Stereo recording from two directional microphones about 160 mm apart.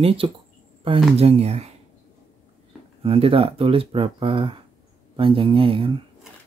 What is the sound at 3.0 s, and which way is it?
Speech, 35° right (ahead or behind).